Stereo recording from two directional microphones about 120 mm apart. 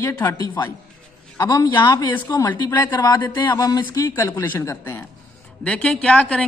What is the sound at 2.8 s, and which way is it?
A woman's voice, 35° left (ahead or behind).